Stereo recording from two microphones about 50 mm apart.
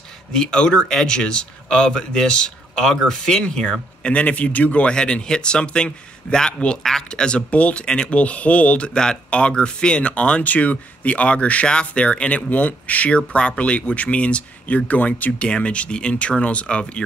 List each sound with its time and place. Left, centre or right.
0.3 s speech: centre
7.1 s speech: centre